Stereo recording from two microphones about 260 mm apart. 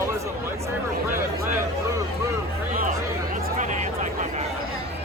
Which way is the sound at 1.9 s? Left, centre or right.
Centre.